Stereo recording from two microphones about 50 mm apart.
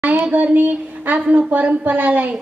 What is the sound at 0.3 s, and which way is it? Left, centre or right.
A woman's voice, right.